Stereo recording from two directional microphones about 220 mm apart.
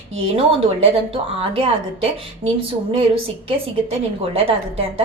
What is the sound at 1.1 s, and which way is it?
A woman's voice, 25° right (ahead or behind).